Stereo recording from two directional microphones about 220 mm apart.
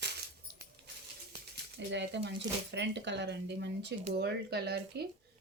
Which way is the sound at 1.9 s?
55° right (ahead or behind).